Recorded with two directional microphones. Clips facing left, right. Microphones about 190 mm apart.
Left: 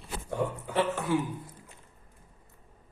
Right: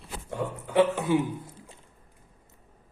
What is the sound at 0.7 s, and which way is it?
Speech, 20° right (ahead or behind).